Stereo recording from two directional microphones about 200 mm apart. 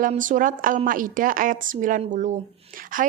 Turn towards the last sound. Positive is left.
turn(degrees=-45)  # may be behind; listen again after turning